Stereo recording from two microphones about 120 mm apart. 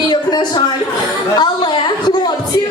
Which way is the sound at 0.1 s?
35° left (ahead or behind).